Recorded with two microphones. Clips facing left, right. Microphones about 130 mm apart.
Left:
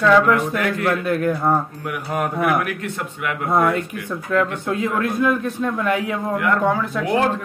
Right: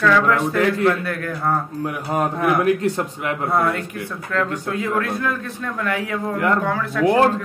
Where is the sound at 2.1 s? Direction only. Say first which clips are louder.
Even; 30° right (ahead or behind).